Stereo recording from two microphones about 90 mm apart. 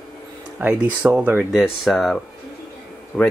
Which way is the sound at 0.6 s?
25° right (ahead or behind).